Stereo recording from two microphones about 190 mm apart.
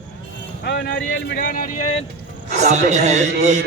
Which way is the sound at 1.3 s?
45° left (ahead or behind).